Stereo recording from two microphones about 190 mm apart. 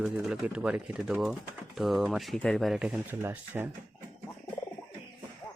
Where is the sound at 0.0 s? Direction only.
5° right (ahead or behind).